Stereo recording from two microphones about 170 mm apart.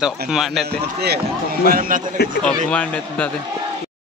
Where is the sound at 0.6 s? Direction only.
70° right (ahead or behind).